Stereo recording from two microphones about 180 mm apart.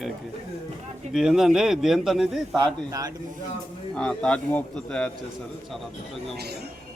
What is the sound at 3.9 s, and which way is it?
A man's voice, 5° left (ahead or behind).